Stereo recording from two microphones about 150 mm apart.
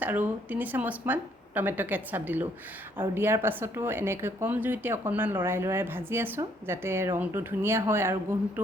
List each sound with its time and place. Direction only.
0.0 s speech: 10° right (ahead or behind)